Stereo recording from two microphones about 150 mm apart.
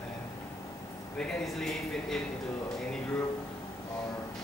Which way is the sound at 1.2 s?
Centre (ahead or behind).